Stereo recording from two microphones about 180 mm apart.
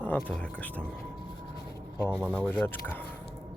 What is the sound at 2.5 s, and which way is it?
Speech, 10° left (ahead or behind).